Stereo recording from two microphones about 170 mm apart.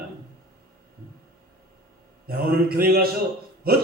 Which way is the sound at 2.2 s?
60° right (ahead or behind).